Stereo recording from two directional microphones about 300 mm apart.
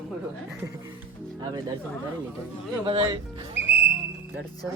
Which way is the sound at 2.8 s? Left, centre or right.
Centre.